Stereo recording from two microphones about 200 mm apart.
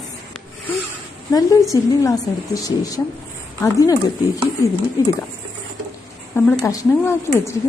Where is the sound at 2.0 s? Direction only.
15° left (ahead or behind).